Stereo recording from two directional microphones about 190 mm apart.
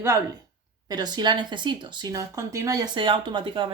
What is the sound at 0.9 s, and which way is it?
Speech, 20° right (ahead or behind).